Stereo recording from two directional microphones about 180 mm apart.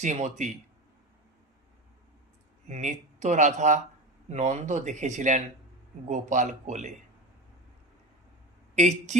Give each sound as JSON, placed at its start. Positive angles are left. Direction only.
{"t": 0.0, "sound": "speech", "side_deg": -40}
{"t": 2.6, "sound": "speech", "side_deg": -40}
{"t": 8.7, "sound": "speech", "side_deg": -40}